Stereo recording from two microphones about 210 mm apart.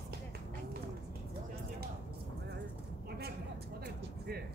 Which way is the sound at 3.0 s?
50° right (ahead or behind).